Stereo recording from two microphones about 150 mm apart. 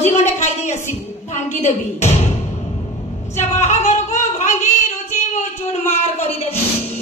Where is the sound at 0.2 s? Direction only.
50° left (ahead or behind).